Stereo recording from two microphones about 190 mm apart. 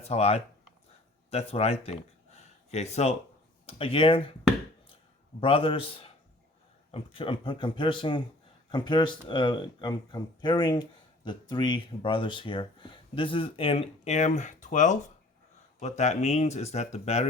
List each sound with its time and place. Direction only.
0.0 s speech: 35° left (ahead or behind)
5.4 s speech: 30° left (ahead or behind)